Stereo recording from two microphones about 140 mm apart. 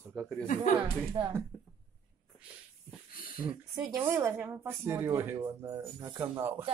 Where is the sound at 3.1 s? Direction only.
90° left.